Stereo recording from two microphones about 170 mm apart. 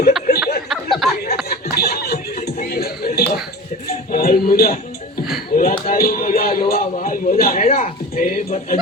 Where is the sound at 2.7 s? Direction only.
65° left (ahead or behind).